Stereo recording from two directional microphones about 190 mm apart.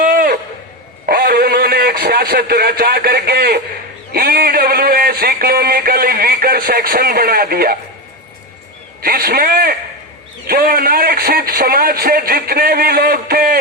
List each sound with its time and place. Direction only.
0.0 s a sound: 45° right (ahead or behind)
1.0 s a man's voice: 50° right (ahead or behind)
9.0 s speech: 50° right (ahead or behind)